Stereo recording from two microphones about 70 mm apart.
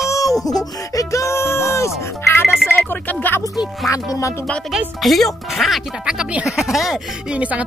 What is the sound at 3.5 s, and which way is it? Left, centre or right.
Speech, centre.